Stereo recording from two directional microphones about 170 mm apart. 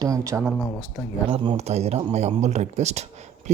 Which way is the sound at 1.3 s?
35° right (ahead or behind).